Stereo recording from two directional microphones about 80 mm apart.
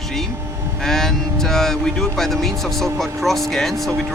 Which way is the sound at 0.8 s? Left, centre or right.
Centre.